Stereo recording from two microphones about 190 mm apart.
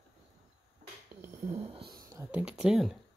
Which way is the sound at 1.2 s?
15° right (ahead or behind).